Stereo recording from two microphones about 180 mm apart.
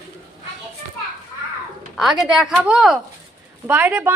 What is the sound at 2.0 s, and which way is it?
A woman's voice, centre (ahead or behind).